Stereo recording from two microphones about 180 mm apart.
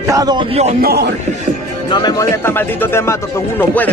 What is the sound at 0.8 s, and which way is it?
Speech, 65° right (ahead or behind).